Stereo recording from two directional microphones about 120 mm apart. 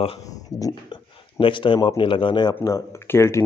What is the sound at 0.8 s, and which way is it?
Speech, 45° left (ahead or behind).